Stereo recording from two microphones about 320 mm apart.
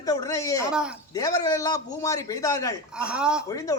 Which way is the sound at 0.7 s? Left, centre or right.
Centre.